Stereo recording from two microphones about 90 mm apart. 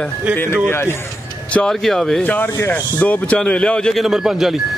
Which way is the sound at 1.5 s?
5° left (ahead or behind).